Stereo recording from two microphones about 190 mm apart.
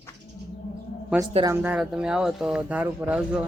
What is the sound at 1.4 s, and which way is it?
Speech, 10° right (ahead or behind).